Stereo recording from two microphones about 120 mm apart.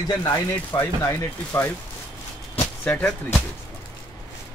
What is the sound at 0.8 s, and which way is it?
Speech, 20° left (ahead or behind).